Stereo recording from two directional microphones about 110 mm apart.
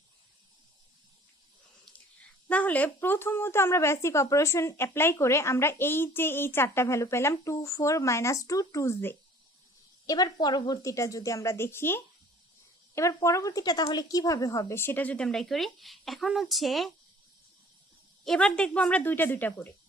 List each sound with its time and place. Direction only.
2.5 s a woman's voice: 15° left (ahead or behind)
10.1 s a woman's voice: 40° left (ahead or behind); by 16.9 s centre (ahead or behind)
18.3 s a woman's voice: 5° left (ahead or behind)